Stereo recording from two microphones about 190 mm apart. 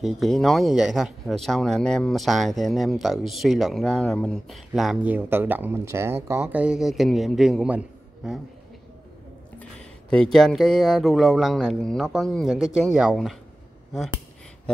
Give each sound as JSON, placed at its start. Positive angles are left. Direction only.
{"t": 0.0, "sound": "speech", "side_deg": 0}
{"t": 9.6, "sound": "speech", "side_deg": 5}